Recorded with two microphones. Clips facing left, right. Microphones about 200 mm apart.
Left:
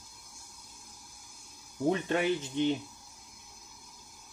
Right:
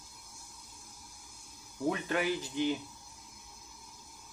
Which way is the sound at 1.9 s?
25° left (ahead or behind).